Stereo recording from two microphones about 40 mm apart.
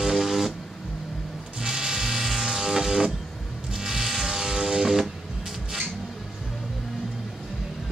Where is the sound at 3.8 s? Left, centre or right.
Centre.